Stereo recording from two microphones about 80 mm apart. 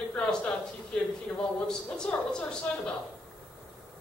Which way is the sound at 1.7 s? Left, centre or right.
Centre.